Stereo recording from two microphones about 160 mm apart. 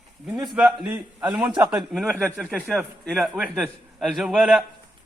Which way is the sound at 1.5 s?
20° right (ahead or behind).